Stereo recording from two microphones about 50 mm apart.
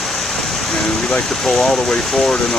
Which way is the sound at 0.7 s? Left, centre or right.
Centre.